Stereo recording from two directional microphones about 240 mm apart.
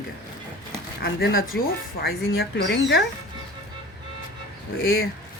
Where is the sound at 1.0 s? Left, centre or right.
Left.